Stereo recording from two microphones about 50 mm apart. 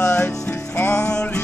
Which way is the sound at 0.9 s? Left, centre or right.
Centre.